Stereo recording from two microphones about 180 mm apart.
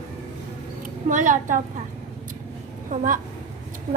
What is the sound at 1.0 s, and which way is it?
Speech, 45° right (ahead or behind).